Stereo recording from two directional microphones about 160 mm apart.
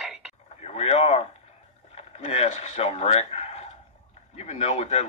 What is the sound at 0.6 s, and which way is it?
Speech, 40° left (ahead or behind).